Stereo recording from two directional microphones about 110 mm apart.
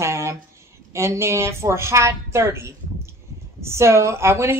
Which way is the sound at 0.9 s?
25° right (ahead or behind).